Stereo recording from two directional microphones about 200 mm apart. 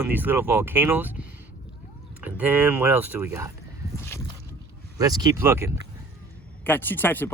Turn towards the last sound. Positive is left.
turn(degrees=10)  # may be behind; listen again after turning